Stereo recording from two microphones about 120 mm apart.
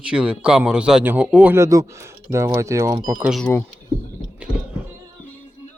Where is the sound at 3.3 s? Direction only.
5° left (ahead or behind).